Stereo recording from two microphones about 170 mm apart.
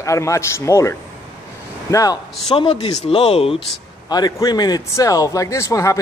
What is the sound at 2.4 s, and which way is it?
Speech, 30° left (ahead or behind).